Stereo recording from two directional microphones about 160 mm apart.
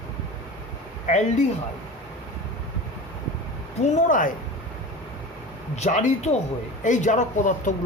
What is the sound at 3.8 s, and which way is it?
Speech, 50° left (ahead or behind).